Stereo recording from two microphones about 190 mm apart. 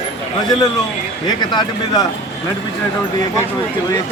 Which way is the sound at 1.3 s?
20° left (ahead or behind).